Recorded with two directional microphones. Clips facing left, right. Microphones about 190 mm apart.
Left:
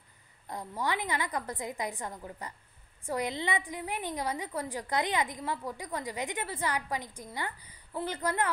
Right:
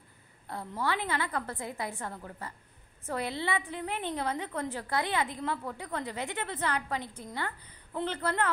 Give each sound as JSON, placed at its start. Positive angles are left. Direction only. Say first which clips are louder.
{"t": 0.5, "sound": "a woman's voice", "louder": "right 1 dB", "side_deg": 15}